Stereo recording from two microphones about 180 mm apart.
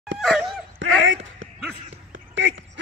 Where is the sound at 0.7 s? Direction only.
90° right.